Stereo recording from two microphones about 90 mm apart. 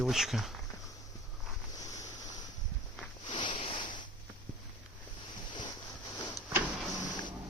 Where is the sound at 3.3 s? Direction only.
70° left (ahead or behind).